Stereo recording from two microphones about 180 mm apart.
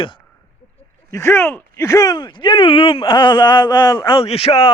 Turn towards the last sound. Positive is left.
turn(degrees=30)  # may be behind; listen again after turning